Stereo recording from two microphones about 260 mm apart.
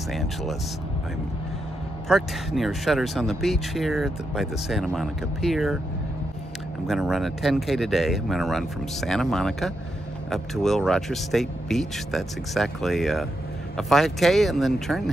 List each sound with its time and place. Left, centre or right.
0.1 s speech: centre
2.0 s speech: centre
6.9 s speech: centre